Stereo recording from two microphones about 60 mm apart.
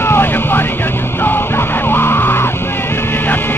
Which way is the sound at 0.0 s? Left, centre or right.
Left.